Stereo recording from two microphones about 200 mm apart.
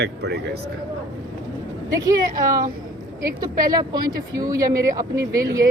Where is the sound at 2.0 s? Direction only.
15° right (ahead or behind).